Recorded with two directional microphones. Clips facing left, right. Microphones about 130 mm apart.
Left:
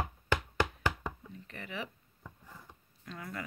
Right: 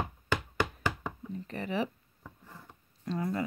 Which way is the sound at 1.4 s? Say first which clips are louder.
Right 9 dB; 35° right (ahead or behind).